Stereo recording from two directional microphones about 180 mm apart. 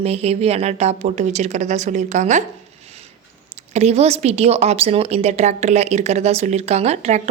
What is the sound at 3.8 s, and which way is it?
A woman's voice, 35° right (ahead or behind).